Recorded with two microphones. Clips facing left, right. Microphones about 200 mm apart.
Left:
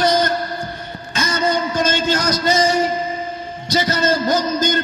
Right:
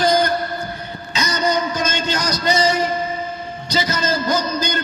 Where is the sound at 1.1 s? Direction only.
50° left (ahead or behind).